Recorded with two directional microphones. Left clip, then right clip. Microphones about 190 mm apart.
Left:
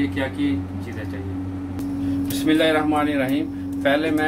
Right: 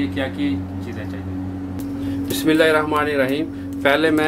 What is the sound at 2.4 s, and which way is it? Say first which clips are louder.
Speech: right 3 dB; 45° right (ahead or behind).